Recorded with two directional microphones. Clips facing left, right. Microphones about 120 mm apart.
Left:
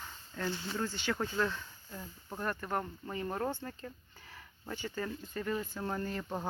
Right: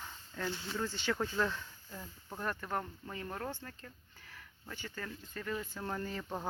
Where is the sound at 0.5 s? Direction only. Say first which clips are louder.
Left 2 dB; 10° left (ahead or behind).